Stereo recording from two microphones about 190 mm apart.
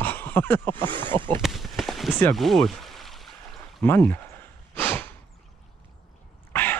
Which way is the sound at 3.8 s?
10° left (ahead or behind).